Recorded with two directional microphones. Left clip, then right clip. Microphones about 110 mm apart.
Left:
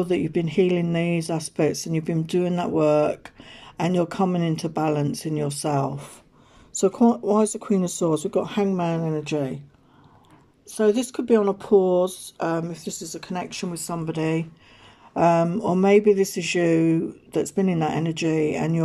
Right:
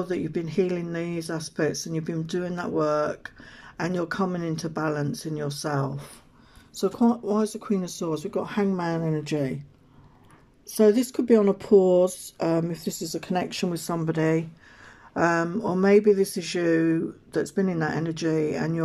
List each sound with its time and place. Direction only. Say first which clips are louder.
0.0 s speech: left 5 dB; 30° left (ahead or behind)
7.1 s speech: left 5 dB; 30° left (ahead or behind); by 9.6 s centre (ahead or behind)
10.8 s speech: right 1 dB; 85° right
11.3 s speech: even; 10° right (ahead or behind)
12.4 s speech: even; 90° right
12.8 s speech: right 2 dB; 10° right (ahead or behind); by 14.4 s 10° left (ahead or behind)
15.1 s speech: left 4 dB; 25° left (ahead or behind)